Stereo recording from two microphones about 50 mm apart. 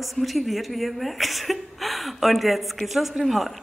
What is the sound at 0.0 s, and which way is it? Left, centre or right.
A woman's voice, centre.